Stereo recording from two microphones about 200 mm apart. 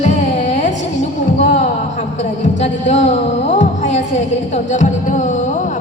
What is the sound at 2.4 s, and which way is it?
Speech, 35° left (ahead or behind).